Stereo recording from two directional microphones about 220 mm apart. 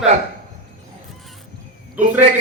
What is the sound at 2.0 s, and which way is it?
Speech, 35° right (ahead or behind).